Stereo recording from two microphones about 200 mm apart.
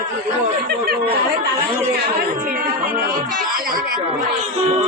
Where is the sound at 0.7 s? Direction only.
50° right (ahead or behind).